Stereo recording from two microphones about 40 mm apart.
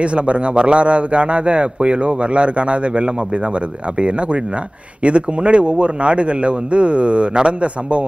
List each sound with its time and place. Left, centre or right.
0.0 s a man's voice: right